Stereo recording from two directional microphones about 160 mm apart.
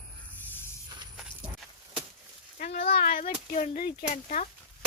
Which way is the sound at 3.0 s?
65° left (ahead or behind).